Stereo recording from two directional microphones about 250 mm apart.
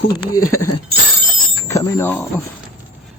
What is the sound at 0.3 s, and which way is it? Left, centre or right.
Speech, left.